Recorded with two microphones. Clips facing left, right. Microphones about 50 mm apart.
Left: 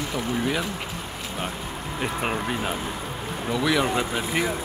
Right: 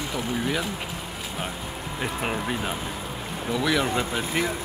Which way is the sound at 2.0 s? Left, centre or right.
Centre.